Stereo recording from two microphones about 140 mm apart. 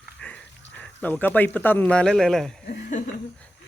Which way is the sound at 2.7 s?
65° left (ahead or behind).